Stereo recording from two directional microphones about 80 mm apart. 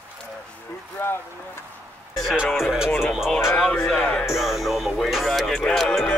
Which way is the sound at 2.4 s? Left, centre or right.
Centre.